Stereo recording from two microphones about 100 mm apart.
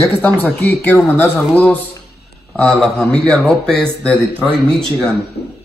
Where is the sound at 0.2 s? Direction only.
20° left (ahead or behind).